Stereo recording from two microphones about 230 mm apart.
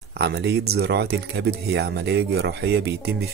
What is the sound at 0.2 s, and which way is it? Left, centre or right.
Speech, right.